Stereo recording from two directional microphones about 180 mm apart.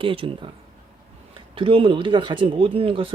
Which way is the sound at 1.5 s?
30° right (ahead or behind).